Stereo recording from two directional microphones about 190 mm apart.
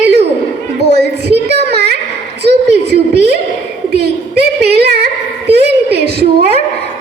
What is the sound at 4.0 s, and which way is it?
A woman's voice, 60° right (ahead or behind).